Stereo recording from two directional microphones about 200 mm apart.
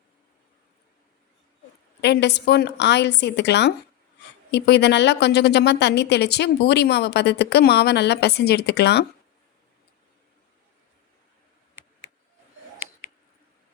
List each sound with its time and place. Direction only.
2.0 s speech: 60° left (ahead or behind)